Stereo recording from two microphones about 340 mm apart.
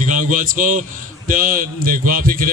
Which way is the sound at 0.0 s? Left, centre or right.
Right.